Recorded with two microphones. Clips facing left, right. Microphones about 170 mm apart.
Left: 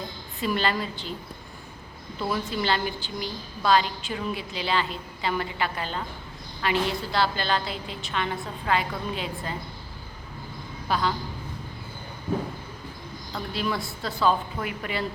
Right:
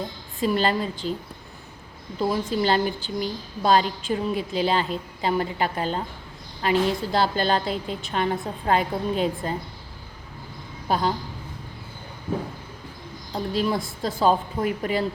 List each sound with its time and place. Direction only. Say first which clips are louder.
0.3 s a woman's voice: right 4 dB; 40° right (ahead or behind)
2.1 s a woman's voice: right 5 dB; 40° right (ahead or behind)
10.8 s a woman's voice: right 3 dB; 40° right (ahead or behind)
13.3 s a woman's voice: right 5 dB; 40° right (ahead or behind)